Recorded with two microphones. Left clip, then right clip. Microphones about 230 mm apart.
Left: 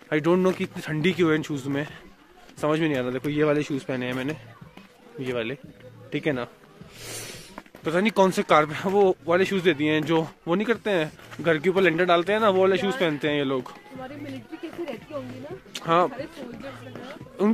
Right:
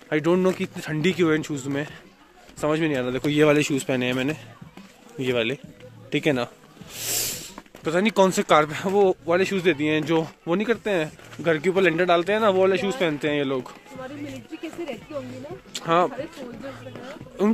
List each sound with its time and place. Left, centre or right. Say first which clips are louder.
0.1 s speech: right 1 dB; centre
3.3 s speech: right 5 dB; right
7.8 s speech: right 1 dB; centre
15.7 s speech: right 1 dB; centre
16.9 s a sound: right 1 dB; centre